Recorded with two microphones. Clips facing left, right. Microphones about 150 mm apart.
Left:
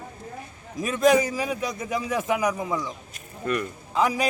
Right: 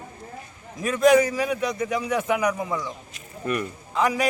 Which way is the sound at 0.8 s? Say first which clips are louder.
Right 2 dB; centre (ahead or behind).